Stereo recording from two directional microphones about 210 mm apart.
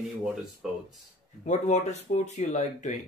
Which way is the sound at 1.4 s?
35° left (ahead or behind).